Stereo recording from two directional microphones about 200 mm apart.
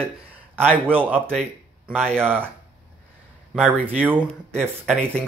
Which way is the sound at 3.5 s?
5° right (ahead or behind).